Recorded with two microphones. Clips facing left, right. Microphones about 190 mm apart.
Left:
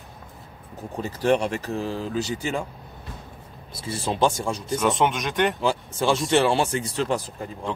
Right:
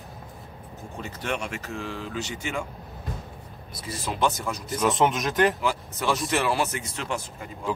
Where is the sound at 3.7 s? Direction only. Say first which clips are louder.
Left 5 dB; 30° left (ahead or behind).